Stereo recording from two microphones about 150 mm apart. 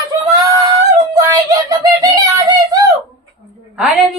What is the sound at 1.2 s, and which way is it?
Speech, 25° right (ahead or behind).